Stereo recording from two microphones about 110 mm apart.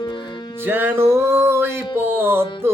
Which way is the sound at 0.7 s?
20° right (ahead or behind).